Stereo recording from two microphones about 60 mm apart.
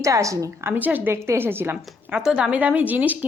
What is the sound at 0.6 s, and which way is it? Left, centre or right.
Speech, right.